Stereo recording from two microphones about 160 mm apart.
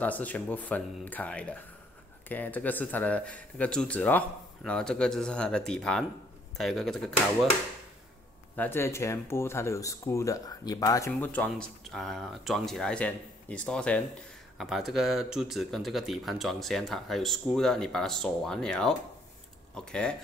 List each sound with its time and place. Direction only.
0.0 s speech: 10° left (ahead or behind)
8.5 s speech: 15° left (ahead or behind)